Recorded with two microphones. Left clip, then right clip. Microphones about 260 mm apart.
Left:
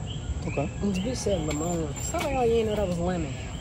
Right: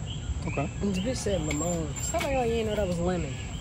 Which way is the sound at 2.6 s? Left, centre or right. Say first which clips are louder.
Left 1 dB; right.